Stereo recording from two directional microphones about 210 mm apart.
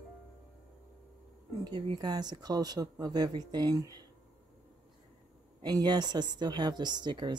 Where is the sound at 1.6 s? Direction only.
20° right (ahead or behind).